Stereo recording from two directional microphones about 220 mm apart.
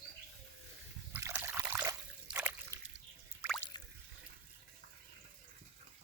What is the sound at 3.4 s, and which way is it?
Drip, 5° left (ahead or behind).